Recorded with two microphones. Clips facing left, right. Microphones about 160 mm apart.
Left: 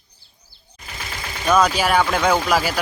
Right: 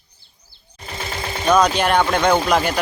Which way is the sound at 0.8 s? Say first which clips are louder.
Right 5 dB; 30° right (ahead or behind).